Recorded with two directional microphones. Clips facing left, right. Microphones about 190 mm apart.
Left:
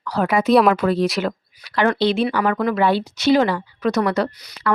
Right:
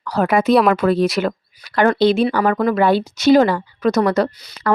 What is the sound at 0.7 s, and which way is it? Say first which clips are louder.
Speech: right 3 dB; 55° right (ahead or behind).